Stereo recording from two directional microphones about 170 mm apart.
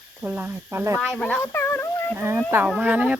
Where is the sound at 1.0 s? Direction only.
5° left (ahead or behind).